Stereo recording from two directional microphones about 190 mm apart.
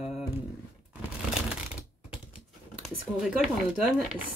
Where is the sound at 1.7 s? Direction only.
5° right (ahead or behind).